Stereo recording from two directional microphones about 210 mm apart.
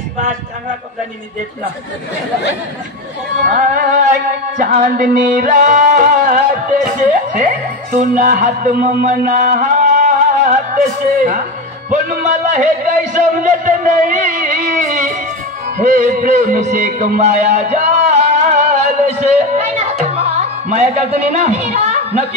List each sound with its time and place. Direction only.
3.4 s music: 40° right (ahead or behind)
12.4 s music: 35° right (ahead or behind)
15.8 s a sound: 35° right (ahead or behind)
20.6 s music: 30° right (ahead or behind)